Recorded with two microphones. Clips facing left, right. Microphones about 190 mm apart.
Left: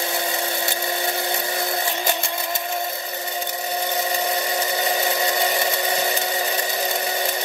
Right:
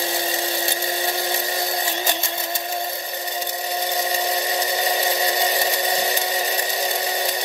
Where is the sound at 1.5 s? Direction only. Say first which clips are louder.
Even; 20° right (ahead or behind).